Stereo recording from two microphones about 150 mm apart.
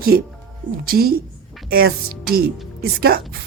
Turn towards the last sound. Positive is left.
turn(degrees=-90)